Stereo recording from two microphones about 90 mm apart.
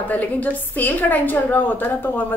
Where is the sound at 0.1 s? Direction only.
20° left (ahead or behind).